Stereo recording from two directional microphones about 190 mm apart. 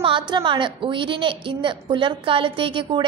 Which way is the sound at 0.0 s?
25° right (ahead or behind).